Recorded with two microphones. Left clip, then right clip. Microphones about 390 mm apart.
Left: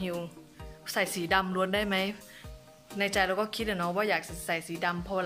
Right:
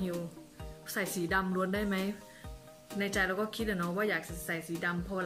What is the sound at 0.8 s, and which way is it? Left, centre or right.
Speech, centre.